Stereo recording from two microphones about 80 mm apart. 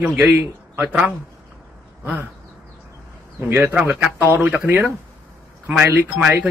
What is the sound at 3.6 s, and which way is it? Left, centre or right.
A man's voice, right.